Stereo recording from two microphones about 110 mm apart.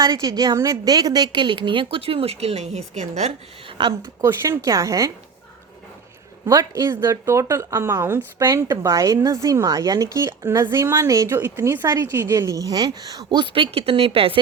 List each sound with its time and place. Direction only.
0.1 s a woman's voice: 35° right (ahead or behind); by 3.3 s 90° right
4.0 s a woman's voice: 25° right (ahead or behind)
6.4 s a woman's voice: 35° right (ahead or behind); by 14.3 s 55° right (ahead or behind)